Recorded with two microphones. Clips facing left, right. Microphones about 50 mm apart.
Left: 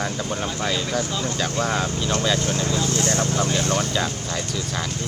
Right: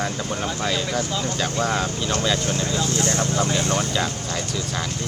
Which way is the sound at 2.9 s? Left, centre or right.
Right.